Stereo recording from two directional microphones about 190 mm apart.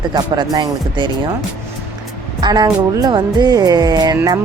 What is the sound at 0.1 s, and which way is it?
Speech, 20° right (ahead or behind).